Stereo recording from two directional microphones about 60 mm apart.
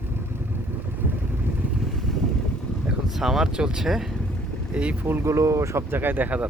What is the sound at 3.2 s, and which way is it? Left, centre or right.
Speech, centre.